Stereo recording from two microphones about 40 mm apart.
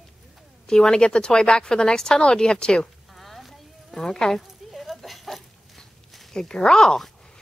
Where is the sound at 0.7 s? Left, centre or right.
Centre.